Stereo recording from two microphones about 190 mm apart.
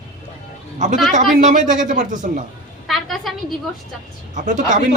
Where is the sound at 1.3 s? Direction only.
40° right (ahead or behind).